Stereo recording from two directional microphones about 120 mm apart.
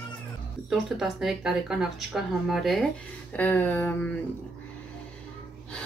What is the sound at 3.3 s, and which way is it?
Speech, 15° left (ahead or behind).